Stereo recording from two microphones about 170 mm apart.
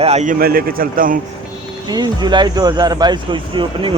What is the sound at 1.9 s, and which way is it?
Speech, 25° right (ahead or behind).